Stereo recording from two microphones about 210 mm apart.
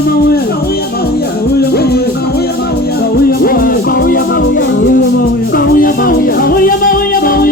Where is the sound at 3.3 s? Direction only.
45° left (ahead or behind).